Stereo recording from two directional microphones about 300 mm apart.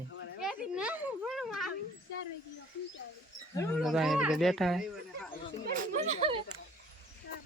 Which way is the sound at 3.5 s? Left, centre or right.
Centre.